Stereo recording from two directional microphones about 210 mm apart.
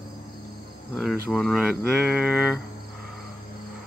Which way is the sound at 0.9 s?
Centre (ahead or behind).